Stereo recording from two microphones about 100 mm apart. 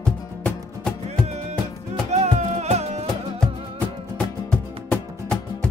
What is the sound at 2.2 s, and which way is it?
Music, 90° right.